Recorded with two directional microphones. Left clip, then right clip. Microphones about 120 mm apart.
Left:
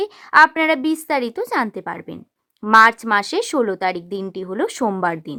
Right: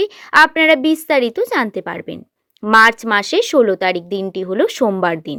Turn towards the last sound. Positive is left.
turn(degrees=-25)  # may be behind; listen again after turning